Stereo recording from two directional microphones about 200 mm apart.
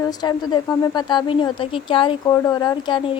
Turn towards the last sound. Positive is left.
turn(degrees=25)  # may be behind; listen again after turning